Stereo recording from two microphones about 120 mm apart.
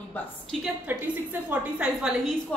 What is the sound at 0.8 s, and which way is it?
A woman's voice, 15° right (ahead or behind).